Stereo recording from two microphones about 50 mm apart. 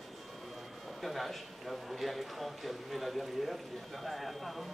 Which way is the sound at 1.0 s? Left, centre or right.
Centre.